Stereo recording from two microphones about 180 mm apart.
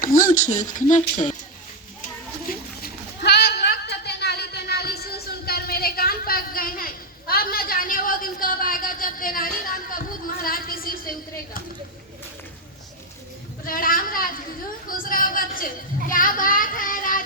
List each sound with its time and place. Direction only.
0.0 s speech: 50° left (ahead or behind)
0.5 s speech: 20° left (ahead or behind)
0.8 s speech: 45° left (ahead or behind)
1.1 s speech: 30° left (ahead or behind)
2.5 s a sound: 60° left (ahead or behind)
13.7 s goat: 50° left (ahead or behind)
14.8 s a sound: 50° left (ahead or behind)
16.0 s child singing: 50° left (ahead or behind)